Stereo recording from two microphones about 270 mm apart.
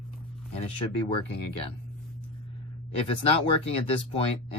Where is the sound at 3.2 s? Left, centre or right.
Left.